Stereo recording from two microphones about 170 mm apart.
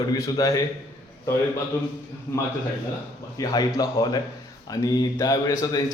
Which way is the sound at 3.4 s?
25° left (ahead or behind).